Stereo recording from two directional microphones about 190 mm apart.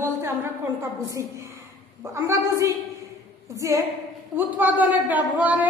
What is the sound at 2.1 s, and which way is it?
A woman's voice, 15° right (ahead or behind).